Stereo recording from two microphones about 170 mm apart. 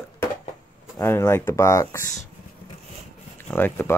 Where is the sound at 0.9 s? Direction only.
15° left (ahead or behind).